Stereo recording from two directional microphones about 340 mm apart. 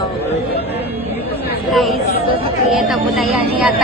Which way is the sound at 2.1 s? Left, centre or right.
Left.